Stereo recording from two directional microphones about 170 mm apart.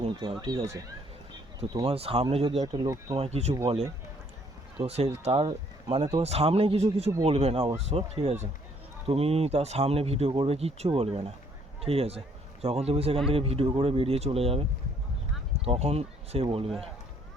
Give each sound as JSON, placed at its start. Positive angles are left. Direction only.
{"t": 0.0, "sound": "speech", "side_deg": -30}
{"t": 1.8, "sound": "speech", "side_deg": -35}
{"t": 2.8, "sound": "speech", "side_deg": -20}
{"t": 3.2, "sound": "speech", "side_deg": -40}
{"t": 4.8, "sound": "speech", "side_deg": -35}
{"t": 15.6, "sound": "speech", "side_deg": -35}